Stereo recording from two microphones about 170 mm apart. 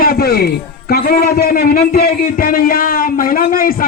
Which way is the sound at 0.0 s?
65° left (ahead or behind).